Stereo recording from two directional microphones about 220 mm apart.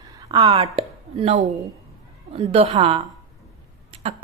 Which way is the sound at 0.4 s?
25° right (ahead or behind).